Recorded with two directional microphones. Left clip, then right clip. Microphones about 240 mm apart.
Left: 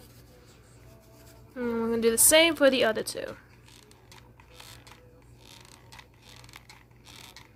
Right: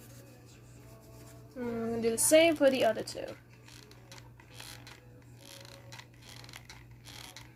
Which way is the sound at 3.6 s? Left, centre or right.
Centre.